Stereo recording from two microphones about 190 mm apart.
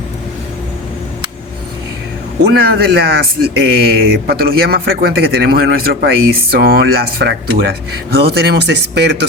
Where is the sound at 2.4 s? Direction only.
55° right (ahead or behind).